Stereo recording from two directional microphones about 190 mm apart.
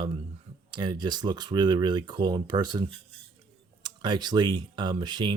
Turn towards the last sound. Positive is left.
turn(degrees=-25)  # may be behind; listen again after turning